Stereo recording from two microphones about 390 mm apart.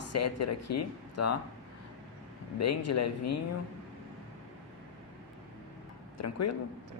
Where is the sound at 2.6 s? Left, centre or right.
Left.